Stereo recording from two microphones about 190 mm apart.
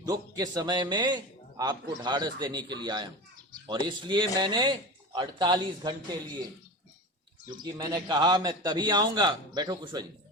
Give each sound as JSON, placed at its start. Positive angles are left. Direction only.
{"t": 0.1, "sound": "a man's voice", "side_deg": -20}
{"t": 7.6, "sound": "a man's voice", "side_deg": -20}